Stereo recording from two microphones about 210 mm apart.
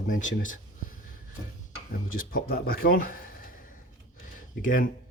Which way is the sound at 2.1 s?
45° left (ahead or behind).